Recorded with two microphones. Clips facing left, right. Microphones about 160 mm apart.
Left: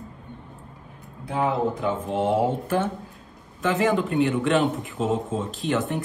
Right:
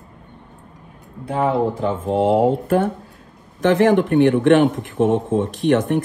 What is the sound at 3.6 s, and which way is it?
Speech, 75° right (ahead or behind).